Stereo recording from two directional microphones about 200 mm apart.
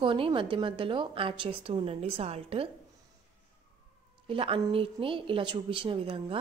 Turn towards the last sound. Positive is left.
turn(degrees=-25)  # may be behind; listen again after turning